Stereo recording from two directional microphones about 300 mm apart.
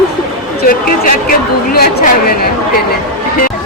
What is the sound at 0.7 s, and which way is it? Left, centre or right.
Speech, left.